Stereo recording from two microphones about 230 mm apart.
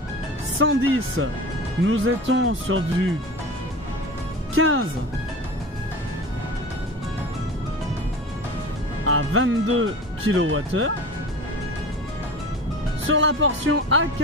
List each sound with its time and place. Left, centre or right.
0.6 s speech: right
4.6 s speech: right
9.0 s speech: right
13.0 s speech: right